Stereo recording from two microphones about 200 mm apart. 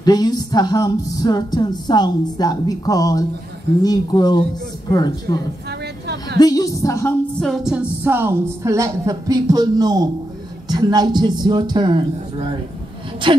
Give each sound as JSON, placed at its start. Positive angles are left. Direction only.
{"t": 0.0, "sound": "a man's voice", "side_deg": 20}